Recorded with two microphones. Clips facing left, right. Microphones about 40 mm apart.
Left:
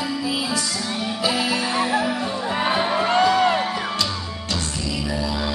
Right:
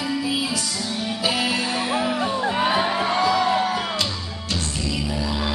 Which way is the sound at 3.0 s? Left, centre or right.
Left.